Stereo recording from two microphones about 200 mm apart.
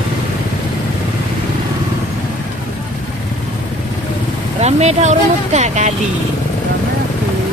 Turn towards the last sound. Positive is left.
turn(degrees=-35)  # may be behind; listen again after turning